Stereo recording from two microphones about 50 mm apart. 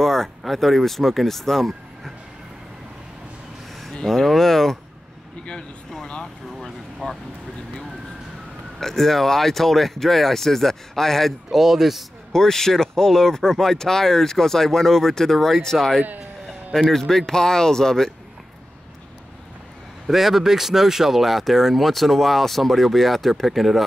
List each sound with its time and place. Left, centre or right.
0.0 s speech: centre
3.8 s a sound: centre
7.0 s speech: centre
8.7 s speech: centre
11.5 s speech: centre
12.3 s speech: centre
20.1 s speech: centre